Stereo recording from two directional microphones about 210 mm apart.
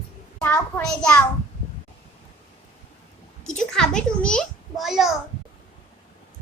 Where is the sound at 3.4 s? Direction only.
5° left (ahead or behind).